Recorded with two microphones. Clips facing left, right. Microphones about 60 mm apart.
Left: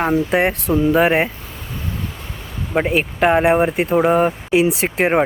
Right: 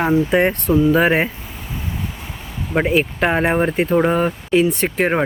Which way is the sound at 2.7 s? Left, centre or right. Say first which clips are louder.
Right 1 dB; centre.